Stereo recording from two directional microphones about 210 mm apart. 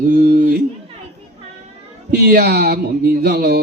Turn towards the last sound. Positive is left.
turn(degrees=-45)  # may be behind; listen again after turning